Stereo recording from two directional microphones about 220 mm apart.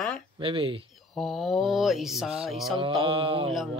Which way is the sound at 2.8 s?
25° right (ahead or behind).